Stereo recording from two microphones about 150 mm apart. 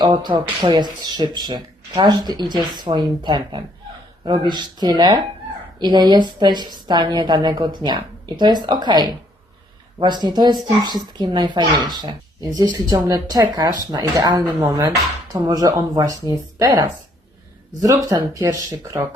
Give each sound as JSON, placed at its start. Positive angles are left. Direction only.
{"t": 0.0, "sound": "speech", "side_deg": -30}